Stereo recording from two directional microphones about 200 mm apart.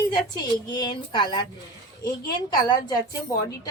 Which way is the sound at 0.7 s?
20° left (ahead or behind).